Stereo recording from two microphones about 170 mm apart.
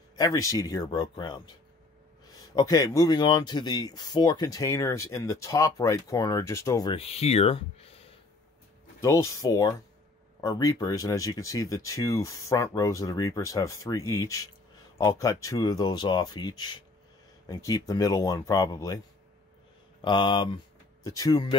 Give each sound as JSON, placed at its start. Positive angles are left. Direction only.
{"t": 0.1, "sound": "speech", "side_deg": 20}
{"t": 2.5, "sound": "speech", "side_deg": 20}
{"t": 7.0, "sound": "speech", "side_deg": 35}
{"t": 9.0, "sound": "speech", "side_deg": 20}
{"t": 20.0, "sound": "speech", "side_deg": 25}